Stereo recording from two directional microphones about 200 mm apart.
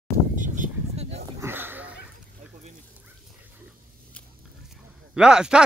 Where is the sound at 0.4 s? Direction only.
35° right (ahead or behind).